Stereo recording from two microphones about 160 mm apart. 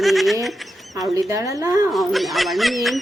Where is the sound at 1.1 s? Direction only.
20° right (ahead or behind).